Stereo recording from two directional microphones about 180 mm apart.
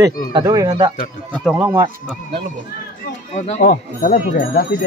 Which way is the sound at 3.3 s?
50° left (ahead or behind).